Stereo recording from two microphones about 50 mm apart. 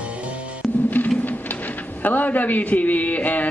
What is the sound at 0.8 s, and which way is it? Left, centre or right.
Music, left.